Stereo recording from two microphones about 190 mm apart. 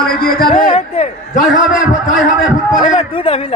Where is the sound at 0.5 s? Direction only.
30° left (ahead or behind).